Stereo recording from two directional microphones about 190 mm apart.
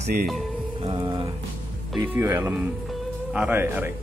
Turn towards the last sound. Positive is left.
turn(degrees=-10)  # may be behind; listen again after turning